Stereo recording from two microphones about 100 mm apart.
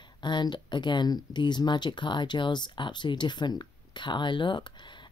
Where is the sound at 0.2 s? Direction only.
50° left (ahead or behind).